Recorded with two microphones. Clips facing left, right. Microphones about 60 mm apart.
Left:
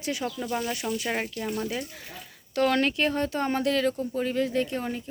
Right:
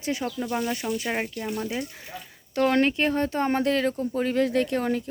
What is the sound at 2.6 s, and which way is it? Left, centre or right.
Speech, right.